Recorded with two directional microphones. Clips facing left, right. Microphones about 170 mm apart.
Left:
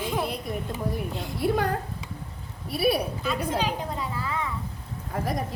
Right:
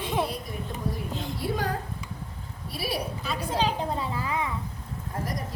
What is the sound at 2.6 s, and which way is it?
Speech, 60° left (ahead or behind).